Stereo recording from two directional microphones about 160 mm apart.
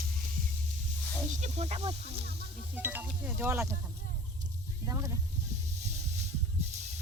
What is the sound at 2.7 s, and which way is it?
Speech, 10° right (ahead or behind).